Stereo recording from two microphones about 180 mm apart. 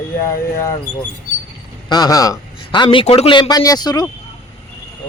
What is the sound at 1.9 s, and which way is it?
A man's voice, 20° left (ahead or behind).